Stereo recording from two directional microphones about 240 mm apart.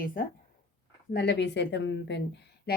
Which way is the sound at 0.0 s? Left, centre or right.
Left.